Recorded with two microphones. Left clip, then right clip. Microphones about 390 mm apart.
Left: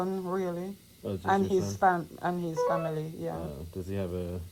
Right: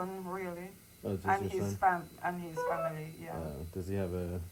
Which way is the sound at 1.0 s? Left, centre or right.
Centre.